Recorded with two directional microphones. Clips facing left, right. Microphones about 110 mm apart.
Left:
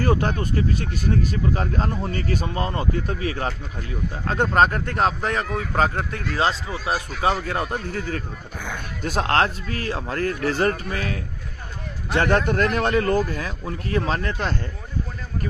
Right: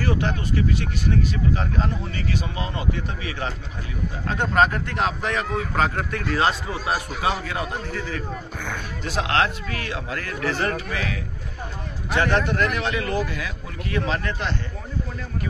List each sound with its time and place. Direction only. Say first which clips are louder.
0.0 s speech: left 3 dB; 45° left (ahead or behind); by 6.5 s 25° left (ahead or behind)
7.2 s speech: left 2 dB; 40° left (ahead or behind)
12.2 s speech: left 2 dB; 45° left (ahead or behind)